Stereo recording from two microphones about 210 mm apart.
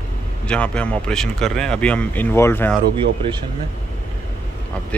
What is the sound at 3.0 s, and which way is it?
Speech, 20° right (ahead or behind).